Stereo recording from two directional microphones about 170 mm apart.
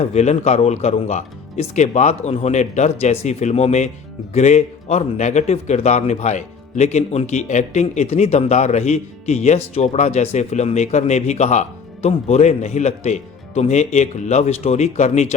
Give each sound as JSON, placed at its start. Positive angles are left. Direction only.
{"t": 0.0, "sound": "a man's voice", "side_deg": 40}